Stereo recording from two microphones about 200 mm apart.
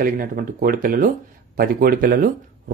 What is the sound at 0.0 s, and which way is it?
Speech, 45° right (ahead or behind).